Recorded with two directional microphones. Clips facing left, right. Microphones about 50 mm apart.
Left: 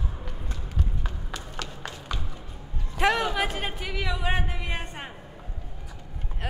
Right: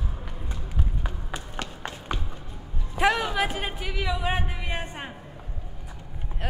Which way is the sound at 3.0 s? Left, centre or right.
Centre.